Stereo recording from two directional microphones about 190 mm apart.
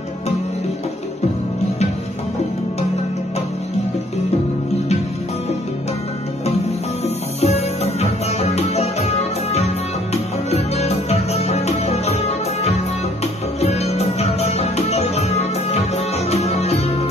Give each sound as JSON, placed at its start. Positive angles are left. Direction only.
{"t": 7.3, "sound": "music", "side_deg": 35}